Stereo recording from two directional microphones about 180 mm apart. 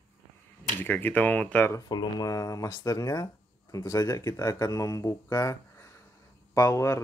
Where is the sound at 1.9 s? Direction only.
20° left (ahead or behind).